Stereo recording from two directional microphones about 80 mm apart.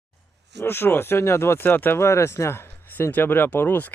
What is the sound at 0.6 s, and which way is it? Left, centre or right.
Speech, left.